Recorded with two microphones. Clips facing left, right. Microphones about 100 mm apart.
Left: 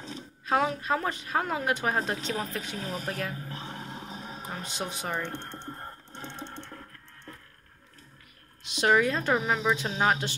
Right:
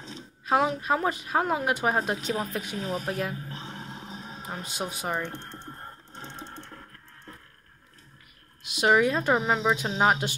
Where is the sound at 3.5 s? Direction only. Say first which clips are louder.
Even; 30° right (ahead or behind).